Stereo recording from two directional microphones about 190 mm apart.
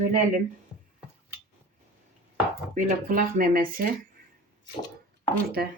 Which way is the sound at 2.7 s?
45° right (ahead or behind).